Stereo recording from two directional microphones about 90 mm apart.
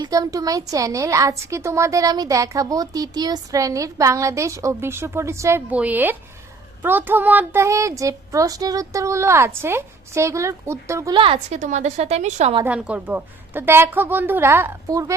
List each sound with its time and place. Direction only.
0.0 s a woman's voice: 40° right (ahead or behind)
5.7 s a woman's voice: 15° right (ahead or behind)
7.6 s a woman's voice: 35° right (ahead or behind)
11.1 s a woman's voice: 75° right (ahead or behind)
12.6 s a woman's voice: 15° right (ahead or behind)
14.8 s a child's voice: 40° right (ahead or behind)